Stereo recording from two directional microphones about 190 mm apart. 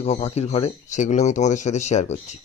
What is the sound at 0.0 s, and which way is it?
Speech, 35° left (ahead or behind).